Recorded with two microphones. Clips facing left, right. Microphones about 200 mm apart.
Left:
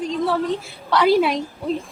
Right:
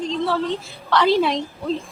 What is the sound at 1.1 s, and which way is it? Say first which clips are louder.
Speech: left 1 dB; centre (ahead or behind).